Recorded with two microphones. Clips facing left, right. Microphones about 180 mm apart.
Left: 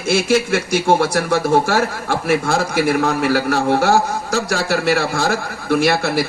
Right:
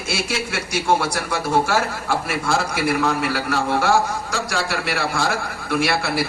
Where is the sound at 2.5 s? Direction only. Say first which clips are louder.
Left 4 dB; 45° left (ahead or behind).